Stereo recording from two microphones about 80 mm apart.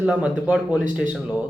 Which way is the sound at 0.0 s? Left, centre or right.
Centre.